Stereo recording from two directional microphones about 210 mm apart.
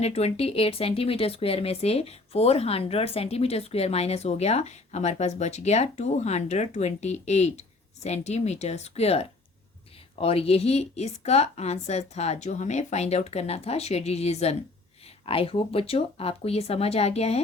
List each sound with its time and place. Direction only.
0.0 s a woman's voice: 30° left (ahead or behind)